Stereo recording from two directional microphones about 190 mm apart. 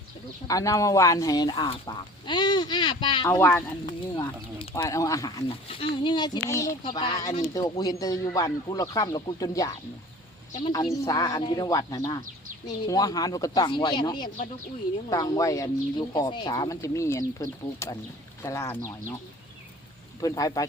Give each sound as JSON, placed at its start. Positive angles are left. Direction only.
{"t": 0.4, "sound": "speech", "side_deg": 20}
{"t": 3.2, "sound": "speech", "side_deg": 15}
{"t": 4.1, "sound": "speech", "side_deg": 25}
{"t": 11.0, "sound": "speech", "side_deg": 20}
{"t": 20.2, "sound": "speech", "side_deg": 20}